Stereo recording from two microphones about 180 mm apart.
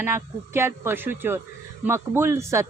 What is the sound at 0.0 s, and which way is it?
Speech, 15° right (ahead or behind).